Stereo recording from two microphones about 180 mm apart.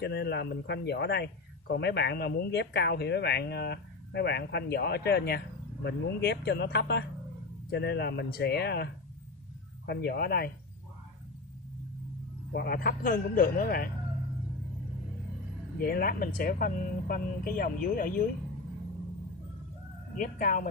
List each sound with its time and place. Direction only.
0.0 s speech: 65° left (ahead or behind)
9.8 s speech: 65° left (ahead or behind)
12.5 s speech: 55° left (ahead or behind)
15.8 s speech: 55° left (ahead or behind)
20.2 s speech: 50° left (ahead or behind)